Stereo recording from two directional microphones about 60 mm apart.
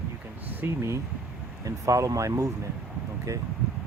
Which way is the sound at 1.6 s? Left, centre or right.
Right.